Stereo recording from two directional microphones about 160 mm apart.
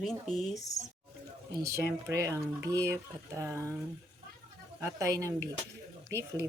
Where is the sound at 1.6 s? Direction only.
20° right (ahead or behind).